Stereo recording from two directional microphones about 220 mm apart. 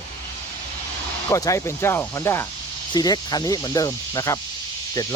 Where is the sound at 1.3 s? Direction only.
15° left (ahead or behind).